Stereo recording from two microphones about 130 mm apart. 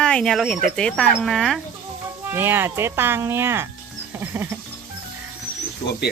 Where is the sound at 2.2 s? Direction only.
15° right (ahead or behind).